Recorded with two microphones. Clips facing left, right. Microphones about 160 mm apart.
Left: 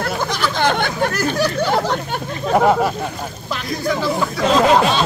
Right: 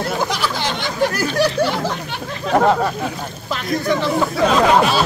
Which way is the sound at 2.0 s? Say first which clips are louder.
Left 2 dB; 45° left (ahead or behind).